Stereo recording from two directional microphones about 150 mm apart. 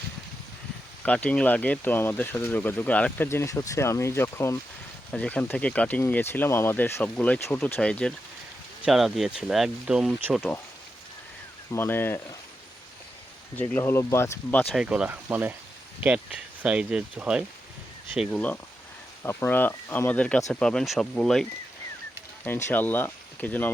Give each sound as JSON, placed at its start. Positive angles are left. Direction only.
{"t": 1.0, "sound": "speech", "side_deg": 10}
{"t": 11.7, "sound": "speech", "side_deg": 15}
{"t": 13.6, "sound": "speech", "side_deg": 15}
{"t": 14.7, "sound": "speech", "side_deg": -5}
{"t": 18.3, "sound": "speech", "side_deg": 10}
{"t": 22.4, "sound": "speech", "side_deg": 10}